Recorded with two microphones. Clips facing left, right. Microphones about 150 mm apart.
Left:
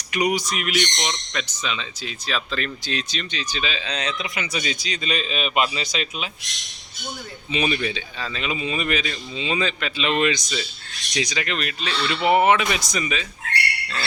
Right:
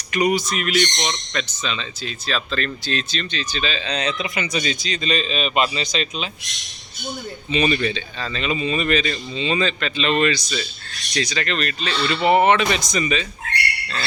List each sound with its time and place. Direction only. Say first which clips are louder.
0.1 s speech: right 3 dB; 15° left (ahead or behind)
7.5 s speech: right 3 dB; 10° left (ahead or behind)